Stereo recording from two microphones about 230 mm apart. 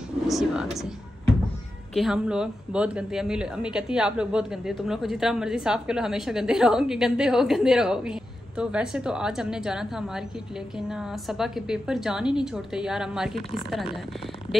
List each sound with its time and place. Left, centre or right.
0.3 s speech: centre
2.0 s speech: centre
13.4 s speech: left